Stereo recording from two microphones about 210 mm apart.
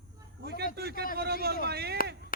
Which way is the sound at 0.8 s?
50° right (ahead or behind).